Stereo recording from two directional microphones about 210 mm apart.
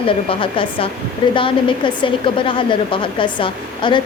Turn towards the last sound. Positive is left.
turn(degrees=25)  # may be behind; listen again after turning